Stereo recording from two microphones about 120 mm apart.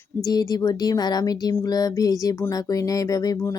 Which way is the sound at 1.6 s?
30° left (ahead or behind).